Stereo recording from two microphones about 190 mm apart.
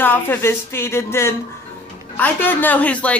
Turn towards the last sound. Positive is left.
turn(degrees=10)  # may be behind; listen again after turning